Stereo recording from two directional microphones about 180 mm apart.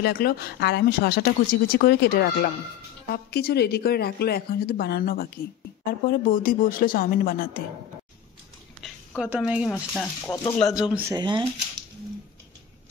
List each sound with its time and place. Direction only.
0.0 s a woman's voice: 60° left (ahead or behind)
8.8 s speech: centre (ahead or behind)
11.1 s speech: 25° right (ahead or behind)